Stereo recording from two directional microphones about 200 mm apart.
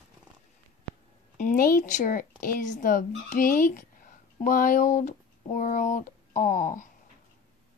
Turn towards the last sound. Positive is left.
turn(degrees=40)  # may be behind; listen again after turning